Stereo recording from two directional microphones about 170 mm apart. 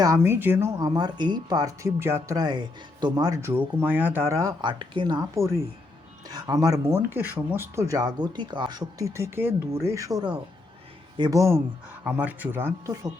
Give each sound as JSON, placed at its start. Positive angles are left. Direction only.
{"t": 0.0, "sound": "speech", "side_deg": -15}